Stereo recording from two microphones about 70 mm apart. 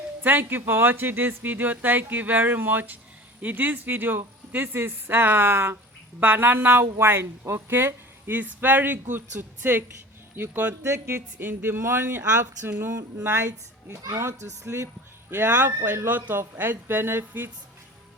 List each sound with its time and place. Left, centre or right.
0.2 s speech: right
10.8 s speech: right
13.2 s speech: right
13.9 s speech: right
15.3 s speech: right